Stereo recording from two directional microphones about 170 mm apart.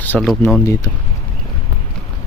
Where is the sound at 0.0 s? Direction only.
10° left (ahead or behind).